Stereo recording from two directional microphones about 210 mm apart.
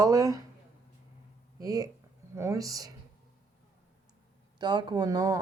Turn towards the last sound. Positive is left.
turn(degrees=-15)  # may be behind; listen again after turning